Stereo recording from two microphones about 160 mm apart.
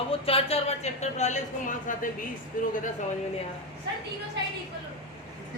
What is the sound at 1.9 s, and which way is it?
Speech, 55° left (ahead or behind).